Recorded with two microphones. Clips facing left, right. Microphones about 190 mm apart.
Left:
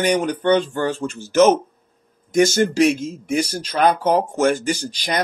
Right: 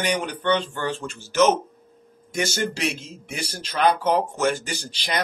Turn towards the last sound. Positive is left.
turn(degrees=40)  # may be behind; listen again after turning